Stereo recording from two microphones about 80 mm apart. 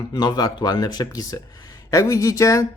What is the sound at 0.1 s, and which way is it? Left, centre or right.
Speech, left.